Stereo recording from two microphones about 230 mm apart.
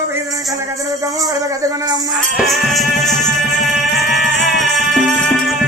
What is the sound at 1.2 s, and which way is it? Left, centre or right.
Speech, centre.